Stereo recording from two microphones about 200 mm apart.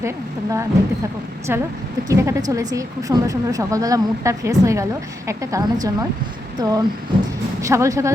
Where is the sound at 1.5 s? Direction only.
10° right (ahead or behind).